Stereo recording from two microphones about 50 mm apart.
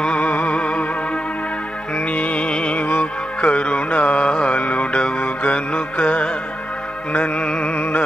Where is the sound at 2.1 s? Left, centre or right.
Left.